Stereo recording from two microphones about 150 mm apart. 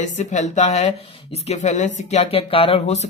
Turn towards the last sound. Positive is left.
turn(degrees=45)  # may be behind; listen again after turning